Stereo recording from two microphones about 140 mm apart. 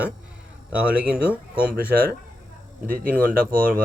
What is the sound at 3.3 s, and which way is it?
Speech, 90° right.